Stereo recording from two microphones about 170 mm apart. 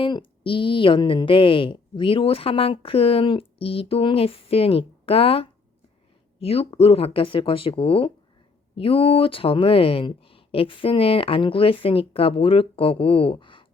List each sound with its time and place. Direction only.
0.0 s a woman's voice: 30° left (ahead or behind)